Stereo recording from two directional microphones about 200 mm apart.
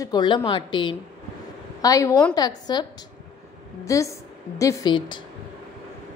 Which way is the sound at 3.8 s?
15° left (ahead or behind).